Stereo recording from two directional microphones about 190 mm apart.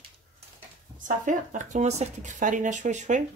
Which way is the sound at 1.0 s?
40° right (ahead or behind).